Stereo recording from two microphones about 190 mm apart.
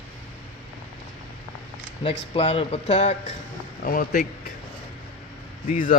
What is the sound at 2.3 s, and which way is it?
Speech, 30° left (ahead or behind).